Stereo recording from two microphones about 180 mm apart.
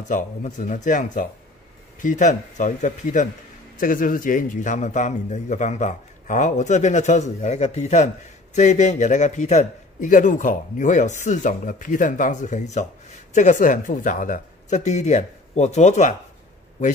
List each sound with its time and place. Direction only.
0.1 s a man's voice: 40° left (ahead or behind)